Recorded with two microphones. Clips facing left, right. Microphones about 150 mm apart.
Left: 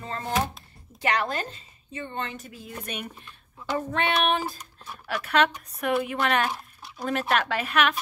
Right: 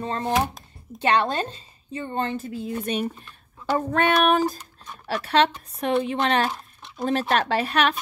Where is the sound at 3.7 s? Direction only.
40° right (ahead or behind).